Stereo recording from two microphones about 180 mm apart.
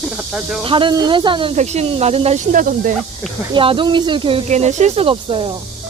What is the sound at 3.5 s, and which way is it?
Speech, 30° right (ahead or behind).